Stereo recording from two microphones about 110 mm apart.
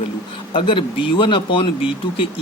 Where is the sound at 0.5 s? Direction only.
50° left (ahead or behind).